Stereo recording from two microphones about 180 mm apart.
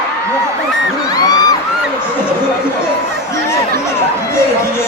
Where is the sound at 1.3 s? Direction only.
20° left (ahead or behind).